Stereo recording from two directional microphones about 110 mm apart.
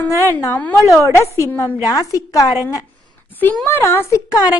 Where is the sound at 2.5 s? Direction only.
25° right (ahead or behind).